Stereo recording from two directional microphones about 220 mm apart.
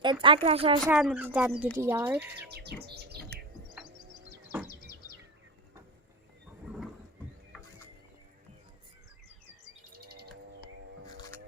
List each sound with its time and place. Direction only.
0.0 s speech: 20° right (ahead or behind)
0.9 s speech: 5° right (ahead or behind)
2.5 s bird: 45° right (ahead or behind)
4.6 s bird: 40° left (ahead or behind)
9.9 s bird: 45° right (ahead or behind)